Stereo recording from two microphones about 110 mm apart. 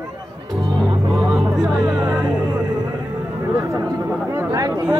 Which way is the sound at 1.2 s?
Centre (ahead or behind).